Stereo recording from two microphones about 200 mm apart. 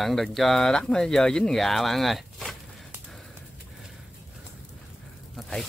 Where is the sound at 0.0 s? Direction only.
Centre (ahead or behind).